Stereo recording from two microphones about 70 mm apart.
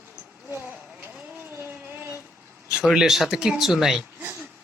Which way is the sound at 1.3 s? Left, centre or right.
Right.